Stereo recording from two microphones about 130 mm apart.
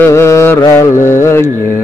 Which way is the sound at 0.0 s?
20° left (ahead or behind).